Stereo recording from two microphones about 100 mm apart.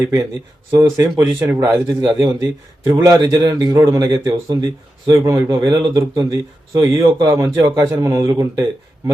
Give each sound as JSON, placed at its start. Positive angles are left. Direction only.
{"t": 0.8, "sound": "a man's voice", "side_deg": -40}
{"t": 1.2, "sound": "a man's voice", "side_deg": -25}